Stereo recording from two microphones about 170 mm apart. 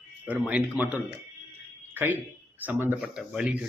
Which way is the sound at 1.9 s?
10° right (ahead or behind).